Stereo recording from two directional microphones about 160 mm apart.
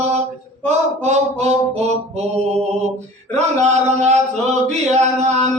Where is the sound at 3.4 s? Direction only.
45° right (ahead or behind).